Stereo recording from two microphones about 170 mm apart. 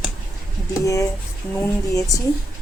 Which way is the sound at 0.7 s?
20° left (ahead or behind).